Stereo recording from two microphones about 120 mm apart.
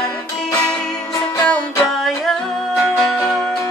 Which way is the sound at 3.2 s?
25° left (ahead or behind).